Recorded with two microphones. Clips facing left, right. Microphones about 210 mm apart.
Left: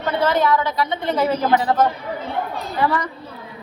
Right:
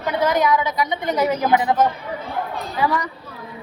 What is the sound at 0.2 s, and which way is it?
A woman's voice, 15° right (ahead or behind).